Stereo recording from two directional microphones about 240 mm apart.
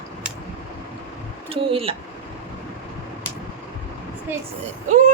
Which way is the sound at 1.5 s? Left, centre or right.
Right.